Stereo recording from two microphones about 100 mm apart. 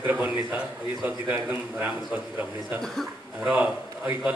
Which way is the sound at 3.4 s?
15° right (ahead or behind).